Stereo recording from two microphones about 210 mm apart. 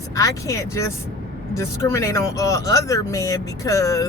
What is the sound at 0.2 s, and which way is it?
Speech, 15° left (ahead or behind).